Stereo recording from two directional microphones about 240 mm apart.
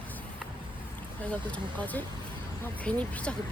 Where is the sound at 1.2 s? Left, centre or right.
Centre.